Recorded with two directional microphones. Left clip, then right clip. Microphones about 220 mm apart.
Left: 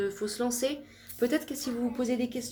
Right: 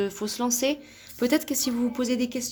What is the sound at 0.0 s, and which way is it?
A woman's voice, 50° right (ahead or behind).